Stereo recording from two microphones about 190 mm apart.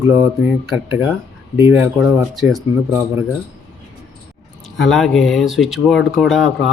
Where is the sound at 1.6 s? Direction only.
10° right (ahead or behind).